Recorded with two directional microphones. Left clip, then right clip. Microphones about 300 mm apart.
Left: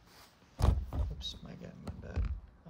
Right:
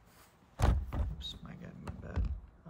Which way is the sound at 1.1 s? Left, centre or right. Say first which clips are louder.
Left 1 dB; centre.